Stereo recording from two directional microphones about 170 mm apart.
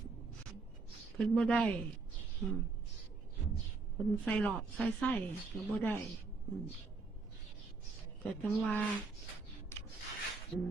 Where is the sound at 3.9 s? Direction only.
10° left (ahead or behind).